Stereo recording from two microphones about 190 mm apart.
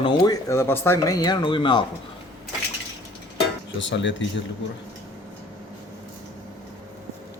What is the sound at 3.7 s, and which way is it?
Speech, 75° left (ahead or behind).